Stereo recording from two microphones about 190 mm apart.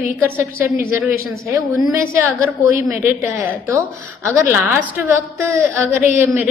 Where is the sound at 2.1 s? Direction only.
10° right (ahead or behind).